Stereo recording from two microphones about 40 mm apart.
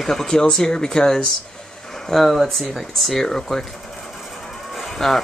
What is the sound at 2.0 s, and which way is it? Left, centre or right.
Speech, centre.